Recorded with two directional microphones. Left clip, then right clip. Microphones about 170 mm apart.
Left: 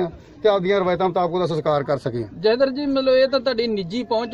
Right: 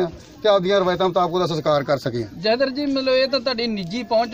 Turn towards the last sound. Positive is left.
turn(degrees=50)  # may be behind; listen again after turning